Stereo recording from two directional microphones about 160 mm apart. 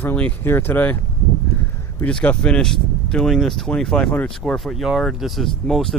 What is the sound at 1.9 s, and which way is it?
Speech, 10° left (ahead or behind).